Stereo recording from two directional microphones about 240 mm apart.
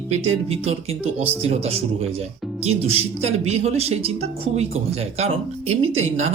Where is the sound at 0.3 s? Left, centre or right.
Right.